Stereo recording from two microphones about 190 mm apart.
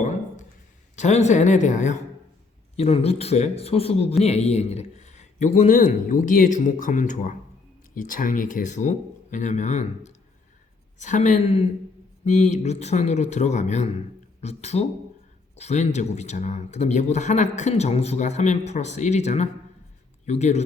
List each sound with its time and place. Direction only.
0.9 s speech: 35° left (ahead or behind)